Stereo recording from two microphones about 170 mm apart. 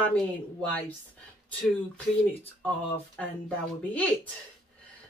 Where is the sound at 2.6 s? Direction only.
5° left (ahead or behind).